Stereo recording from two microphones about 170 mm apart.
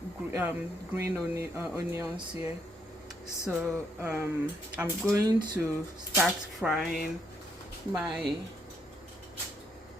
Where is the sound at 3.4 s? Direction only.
10° right (ahead or behind).